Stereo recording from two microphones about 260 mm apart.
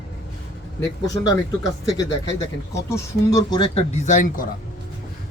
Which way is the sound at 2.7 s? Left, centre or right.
Centre.